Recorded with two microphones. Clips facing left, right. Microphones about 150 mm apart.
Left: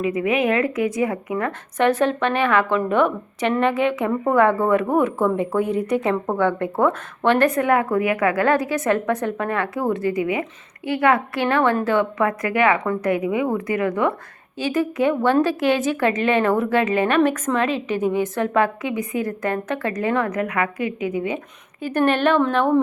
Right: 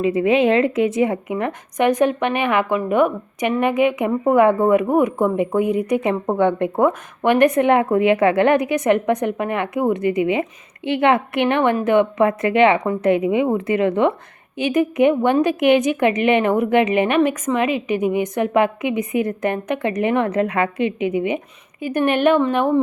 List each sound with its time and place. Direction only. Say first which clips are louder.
0.0 s a woman's voice: right 4 dB; 30° right (ahead or behind); by 22.4 s 15° right (ahead or behind)